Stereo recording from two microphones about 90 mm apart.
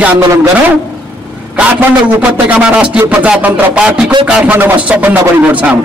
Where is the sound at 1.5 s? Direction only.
15° right (ahead or behind).